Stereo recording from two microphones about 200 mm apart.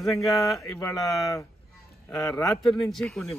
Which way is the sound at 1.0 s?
Centre (ahead or behind).